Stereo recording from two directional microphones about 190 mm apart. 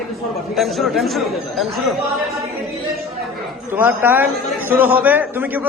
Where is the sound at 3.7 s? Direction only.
10° right (ahead or behind).